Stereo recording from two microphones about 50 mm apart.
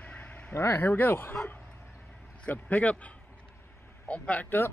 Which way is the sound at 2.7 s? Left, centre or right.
Left.